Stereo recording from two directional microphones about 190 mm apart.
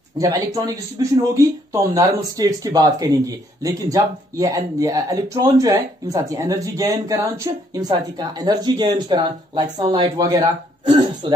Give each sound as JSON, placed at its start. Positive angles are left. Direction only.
{"t": 0.2, "sound": "speech", "side_deg": -20}